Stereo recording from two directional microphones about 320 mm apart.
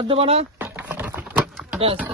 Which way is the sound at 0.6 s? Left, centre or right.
Centre.